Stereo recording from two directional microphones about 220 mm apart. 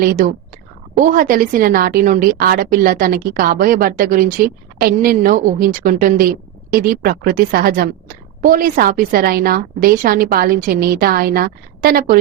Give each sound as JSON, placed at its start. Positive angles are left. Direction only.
{"t": 0.0, "sound": "a woman's voice", "side_deg": -40}